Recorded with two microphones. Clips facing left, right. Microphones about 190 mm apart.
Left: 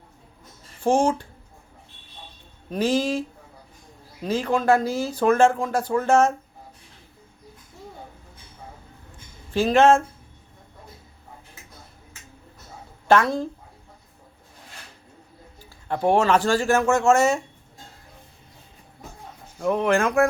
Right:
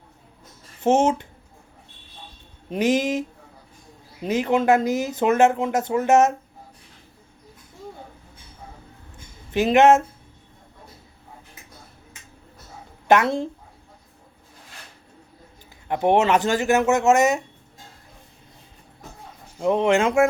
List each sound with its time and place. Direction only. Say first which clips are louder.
0.8 s speech: right 2 dB; 20° right (ahead or behind)
2.6 s speech: right 1 dB; 20° right (ahead or behind)
9.5 s speech: right 1 dB; 20° right (ahead or behind)
13.1 s speech: right 1 dB; 20° right (ahead or behind)
15.9 s speech: right 1 dB; 20° right (ahead or behind)
19.5 s speech: right 2 dB; 25° right (ahead or behind)